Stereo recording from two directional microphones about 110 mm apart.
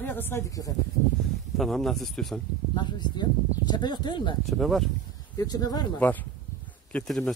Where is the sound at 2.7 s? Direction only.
40° left (ahead or behind).